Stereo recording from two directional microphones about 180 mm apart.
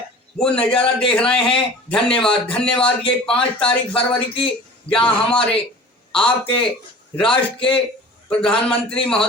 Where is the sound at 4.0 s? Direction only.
30° left (ahead or behind).